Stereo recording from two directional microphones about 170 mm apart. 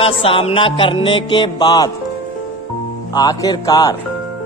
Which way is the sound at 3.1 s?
25° left (ahead or behind).